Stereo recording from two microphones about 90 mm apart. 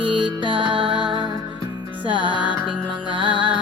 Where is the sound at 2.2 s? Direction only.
60° left (ahead or behind).